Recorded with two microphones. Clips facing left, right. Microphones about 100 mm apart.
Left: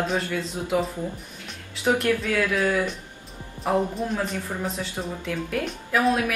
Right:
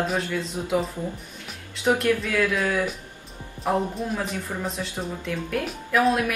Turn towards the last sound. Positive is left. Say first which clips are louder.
# right 1 dB
turn(degrees=0)  # may be behind; listen again after turning